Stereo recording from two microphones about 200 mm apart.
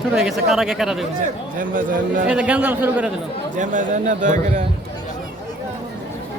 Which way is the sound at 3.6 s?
40° right (ahead or behind).